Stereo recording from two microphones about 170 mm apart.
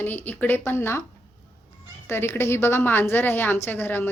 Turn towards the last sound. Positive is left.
turn(degrees=10)  # may be behind; listen again after turning